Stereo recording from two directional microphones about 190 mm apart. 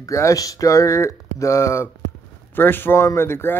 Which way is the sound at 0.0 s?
15° left (ahead or behind).